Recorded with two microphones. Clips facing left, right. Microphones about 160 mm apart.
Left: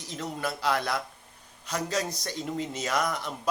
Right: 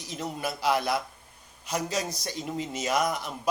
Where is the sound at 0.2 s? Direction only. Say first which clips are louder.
Even; 15° right (ahead or behind).